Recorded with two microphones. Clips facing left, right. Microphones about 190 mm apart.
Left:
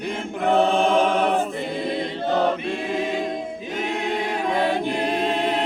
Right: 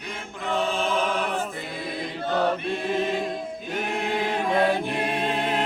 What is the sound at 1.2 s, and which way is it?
Choir, 55° left (ahead or behind).